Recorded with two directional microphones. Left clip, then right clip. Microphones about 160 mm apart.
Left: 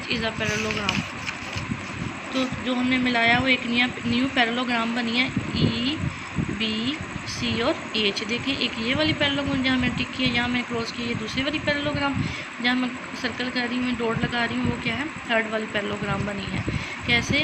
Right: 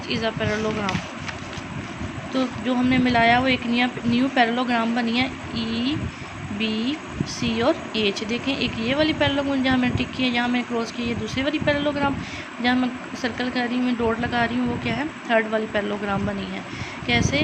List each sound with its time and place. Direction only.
0.1 s speech: 20° right (ahead or behind)
2.3 s speech: 25° right (ahead or behind)